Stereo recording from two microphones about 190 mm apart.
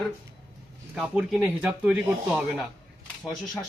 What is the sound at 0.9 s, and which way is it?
Speech, 5° right (ahead or behind).